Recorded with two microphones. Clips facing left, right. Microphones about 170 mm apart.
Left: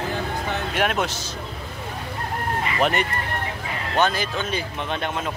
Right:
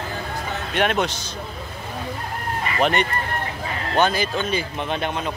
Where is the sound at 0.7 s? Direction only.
5° left (ahead or behind).